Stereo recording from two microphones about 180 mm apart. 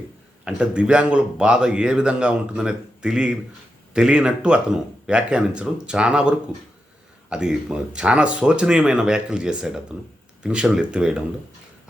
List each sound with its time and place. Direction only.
0.4 s speech: 5° right (ahead or behind)